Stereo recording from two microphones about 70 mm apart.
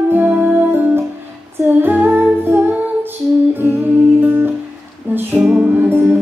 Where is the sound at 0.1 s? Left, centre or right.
Right.